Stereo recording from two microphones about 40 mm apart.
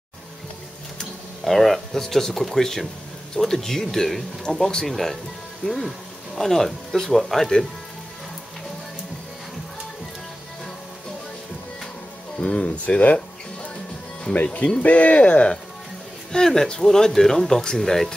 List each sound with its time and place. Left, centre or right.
1.4 s speech: centre
4.8 s speech: centre
6.3 s speech: centre
12.4 s speech: left
16.3 s speech: centre